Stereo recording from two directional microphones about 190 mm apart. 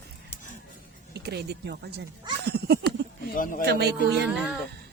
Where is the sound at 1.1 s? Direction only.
60° right (ahead or behind).